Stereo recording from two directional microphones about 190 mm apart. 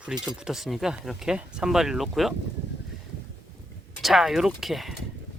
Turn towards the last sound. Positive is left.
turn(degrees=0)  # may be behind; listen again after turning